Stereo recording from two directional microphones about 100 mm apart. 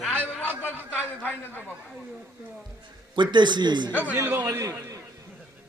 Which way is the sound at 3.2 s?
50° right (ahead or behind).